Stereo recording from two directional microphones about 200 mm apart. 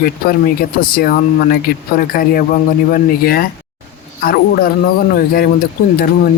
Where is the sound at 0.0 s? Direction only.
45° left (ahead or behind).